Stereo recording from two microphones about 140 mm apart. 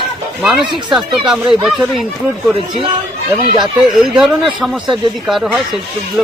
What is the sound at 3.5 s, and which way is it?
Speech, 5° right (ahead or behind).